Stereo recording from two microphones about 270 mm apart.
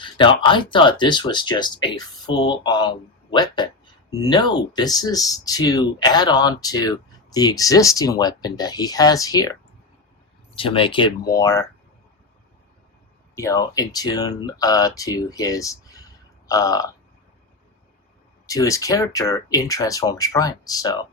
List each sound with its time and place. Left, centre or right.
0.0 s speech: centre
13.3 s speech: centre
18.4 s speech: centre